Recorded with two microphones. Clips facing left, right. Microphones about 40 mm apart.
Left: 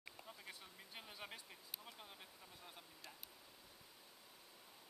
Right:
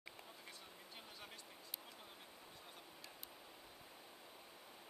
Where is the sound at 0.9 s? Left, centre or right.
Centre.